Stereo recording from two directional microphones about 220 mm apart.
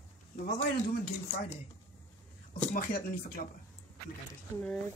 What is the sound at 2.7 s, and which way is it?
Speech, 40° left (ahead or behind).